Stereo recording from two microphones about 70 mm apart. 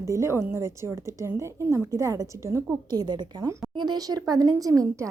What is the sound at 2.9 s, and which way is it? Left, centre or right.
A woman's voice, right.